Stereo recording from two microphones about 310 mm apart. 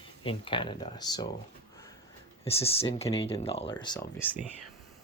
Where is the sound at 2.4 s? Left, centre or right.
Centre.